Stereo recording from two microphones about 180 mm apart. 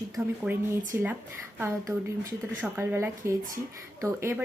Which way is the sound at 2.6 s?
10° right (ahead or behind).